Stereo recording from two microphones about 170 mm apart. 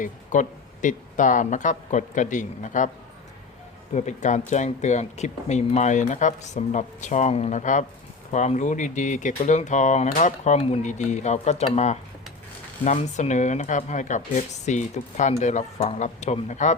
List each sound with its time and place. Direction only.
0.0 s speech: 45° left (ahead or behind)
3.9 s speech: 45° left (ahead or behind)